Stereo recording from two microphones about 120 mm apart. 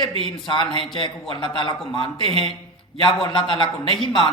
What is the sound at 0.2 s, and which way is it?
A woman's voice, 45° left (ahead or behind).